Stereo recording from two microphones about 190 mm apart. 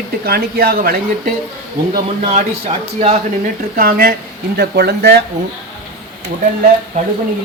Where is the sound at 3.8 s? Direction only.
50° right (ahead or behind).